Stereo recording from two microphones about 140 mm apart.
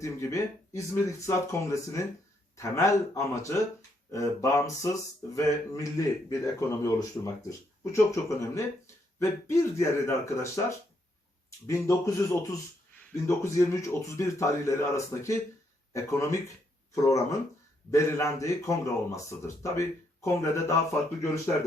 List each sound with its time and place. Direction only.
0.0 s speech: 20° left (ahead or behind)